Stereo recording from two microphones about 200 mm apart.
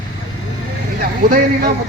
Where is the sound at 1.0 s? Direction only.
45° right (ahead or behind).